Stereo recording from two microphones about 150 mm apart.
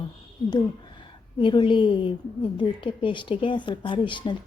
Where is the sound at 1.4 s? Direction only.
35° left (ahead or behind).